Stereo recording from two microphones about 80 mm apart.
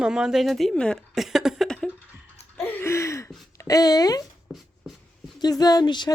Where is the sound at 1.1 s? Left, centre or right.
Centre.